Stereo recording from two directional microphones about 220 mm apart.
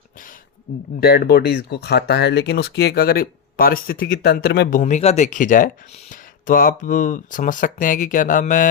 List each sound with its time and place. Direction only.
0.9 s speech: 45° left (ahead or behind)
4.8 s speech: 30° left (ahead or behind)